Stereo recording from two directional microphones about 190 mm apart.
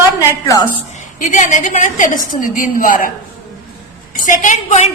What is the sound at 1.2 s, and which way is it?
A woman's voice, 45° left (ahead or behind).